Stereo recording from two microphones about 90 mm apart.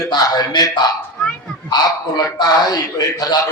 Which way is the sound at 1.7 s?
50° left (ahead or behind).